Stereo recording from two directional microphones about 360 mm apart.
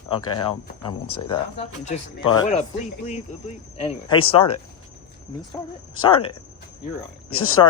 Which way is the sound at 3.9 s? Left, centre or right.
Centre.